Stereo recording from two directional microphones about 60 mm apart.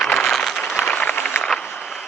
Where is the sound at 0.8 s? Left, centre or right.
Left.